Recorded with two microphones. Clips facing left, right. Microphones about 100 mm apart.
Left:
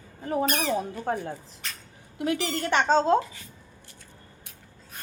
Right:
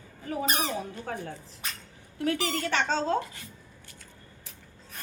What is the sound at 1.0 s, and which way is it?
Speech, 30° left (ahead or behind).